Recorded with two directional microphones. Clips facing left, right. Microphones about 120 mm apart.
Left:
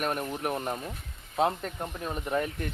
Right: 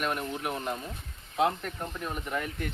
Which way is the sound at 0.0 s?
45° left (ahead or behind).